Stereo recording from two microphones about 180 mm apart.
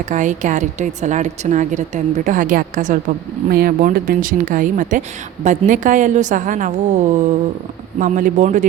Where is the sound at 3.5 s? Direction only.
55° right (ahead or behind).